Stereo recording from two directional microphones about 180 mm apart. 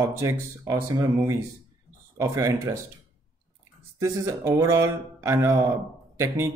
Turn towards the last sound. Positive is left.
turn(degrees=-15)  # may be behind; listen again after turning